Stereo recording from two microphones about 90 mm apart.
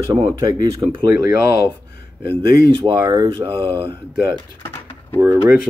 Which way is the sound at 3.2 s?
70° right (ahead or behind).